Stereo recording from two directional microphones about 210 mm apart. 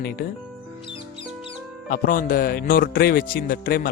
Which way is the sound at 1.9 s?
40° left (ahead or behind).